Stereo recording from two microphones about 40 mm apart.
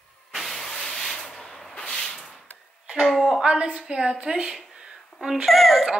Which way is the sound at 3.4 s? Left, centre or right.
Right.